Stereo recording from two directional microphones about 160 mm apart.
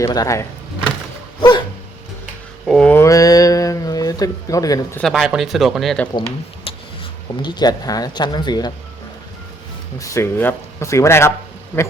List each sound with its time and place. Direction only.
0.0 s speech: 20° left (ahead or behind)
1.4 s dog: 30° left (ahead or behind)
2.6 s speech: 5° left (ahead or behind)
3.0 s a sound: 20° left (ahead or behind)
4.9 s speech: centre (ahead or behind)
6.7 s a sound: 35° left (ahead or behind)
7.4 s speech: 25° left (ahead or behind)
10.0 s speech: 20° left (ahead or behind)